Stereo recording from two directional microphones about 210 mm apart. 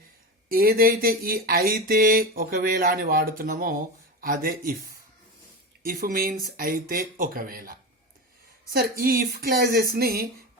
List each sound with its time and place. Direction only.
0.4 s speech: 45° right (ahead or behind)
5.8 s speech: 45° right (ahead or behind)